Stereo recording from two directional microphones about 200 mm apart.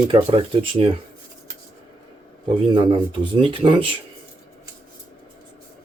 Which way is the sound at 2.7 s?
25° right (ahead or behind).